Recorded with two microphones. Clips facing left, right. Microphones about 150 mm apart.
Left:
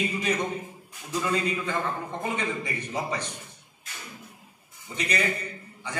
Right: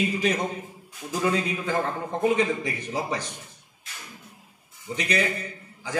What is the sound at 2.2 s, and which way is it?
A man's voice, 90° right.